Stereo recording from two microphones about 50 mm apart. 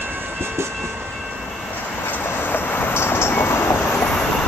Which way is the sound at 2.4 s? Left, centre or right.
Left.